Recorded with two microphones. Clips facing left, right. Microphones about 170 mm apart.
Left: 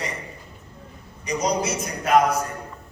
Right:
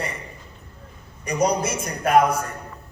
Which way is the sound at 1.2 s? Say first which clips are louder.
Right 2 dB; 55° right (ahead or behind).